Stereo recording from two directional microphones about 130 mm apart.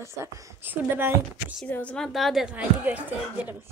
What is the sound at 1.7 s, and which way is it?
A woman's voice, 10° left (ahead or behind).